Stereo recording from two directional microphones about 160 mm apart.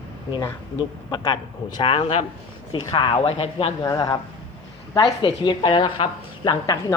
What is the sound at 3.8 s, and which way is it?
Speech, 25° left (ahead or behind).